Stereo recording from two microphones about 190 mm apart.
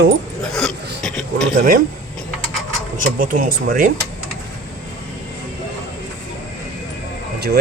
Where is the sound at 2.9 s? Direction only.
45° right (ahead or behind).